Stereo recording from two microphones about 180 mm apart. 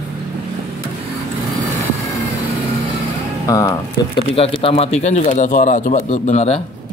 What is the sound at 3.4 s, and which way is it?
Speech, 20° left (ahead or behind).